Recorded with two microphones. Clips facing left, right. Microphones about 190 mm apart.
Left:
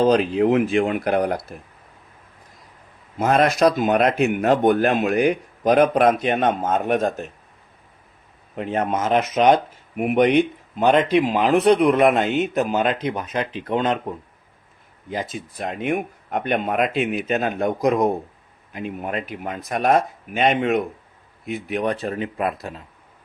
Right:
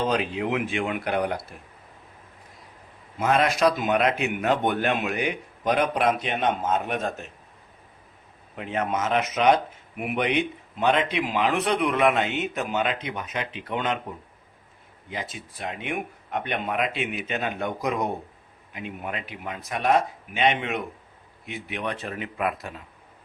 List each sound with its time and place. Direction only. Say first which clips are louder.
0.1 s speech: left 8 dB; 40° left (ahead or behind)
3.2 s a man's voice: left 4 dB; 40° left (ahead or behind)
8.5 s speech: left 4 dB; 40° left (ahead or behind)
15.1 s a man's voice: left 7 dB; 40° left (ahead or behind)